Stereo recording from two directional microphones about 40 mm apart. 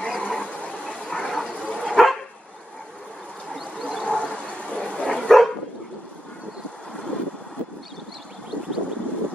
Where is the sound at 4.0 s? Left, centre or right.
Centre.